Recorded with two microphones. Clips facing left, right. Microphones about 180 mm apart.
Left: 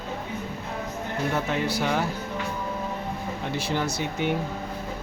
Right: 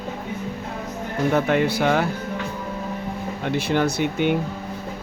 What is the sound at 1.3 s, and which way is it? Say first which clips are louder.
Speech: right 8 dB; 60° right (ahead or behind).